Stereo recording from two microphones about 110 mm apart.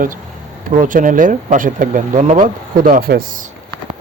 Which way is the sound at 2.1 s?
90° right.